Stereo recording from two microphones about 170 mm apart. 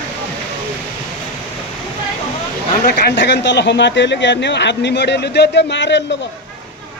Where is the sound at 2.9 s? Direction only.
70° left (ahead or behind); by 6.0 s 90° left.